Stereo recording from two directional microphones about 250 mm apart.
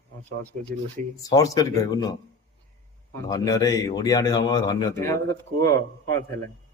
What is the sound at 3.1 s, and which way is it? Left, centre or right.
Speech, centre.